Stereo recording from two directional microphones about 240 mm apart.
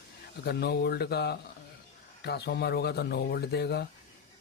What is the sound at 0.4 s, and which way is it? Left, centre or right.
Speech, left.